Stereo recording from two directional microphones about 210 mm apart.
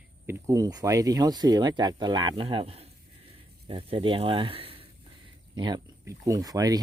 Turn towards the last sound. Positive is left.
turn(degrees=-15)  # may be behind; listen again after turning